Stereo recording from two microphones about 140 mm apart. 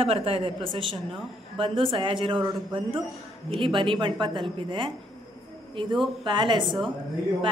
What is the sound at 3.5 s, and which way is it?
A woman's voice, 35° right (ahead or behind).